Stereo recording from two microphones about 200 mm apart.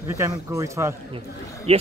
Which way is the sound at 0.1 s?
15° right (ahead or behind).